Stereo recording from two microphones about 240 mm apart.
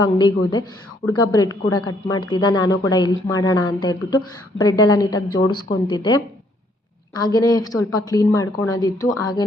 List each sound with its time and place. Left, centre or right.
0.2 s a woman's voice: centre